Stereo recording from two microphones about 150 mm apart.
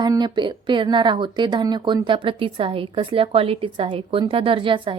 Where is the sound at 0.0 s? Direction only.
30° right (ahead or behind).